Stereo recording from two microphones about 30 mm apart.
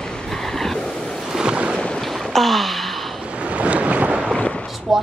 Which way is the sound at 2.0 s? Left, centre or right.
Centre.